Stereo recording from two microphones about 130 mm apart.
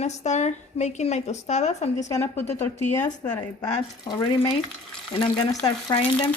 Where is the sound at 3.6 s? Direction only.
30° left (ahead or behind).